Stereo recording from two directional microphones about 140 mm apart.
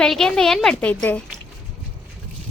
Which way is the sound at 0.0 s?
5° left (ahead or behind).